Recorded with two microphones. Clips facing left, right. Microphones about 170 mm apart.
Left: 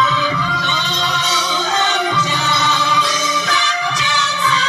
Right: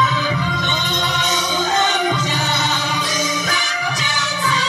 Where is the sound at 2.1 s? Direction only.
45° right (ahead or behind).